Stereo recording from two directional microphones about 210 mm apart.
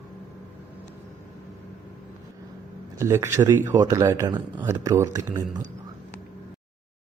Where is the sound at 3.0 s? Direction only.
15° right (ahead or behind).